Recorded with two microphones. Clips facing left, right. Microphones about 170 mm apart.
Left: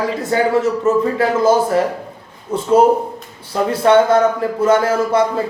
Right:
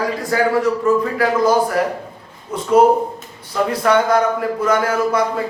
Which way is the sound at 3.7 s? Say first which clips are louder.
Left 4 dB; 25° left (ahead or behind).